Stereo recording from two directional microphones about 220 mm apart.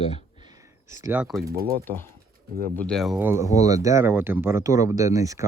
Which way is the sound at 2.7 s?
5° left (ahead or behind).